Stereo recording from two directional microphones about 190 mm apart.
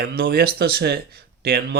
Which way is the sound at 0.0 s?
55° right (ahead or behind).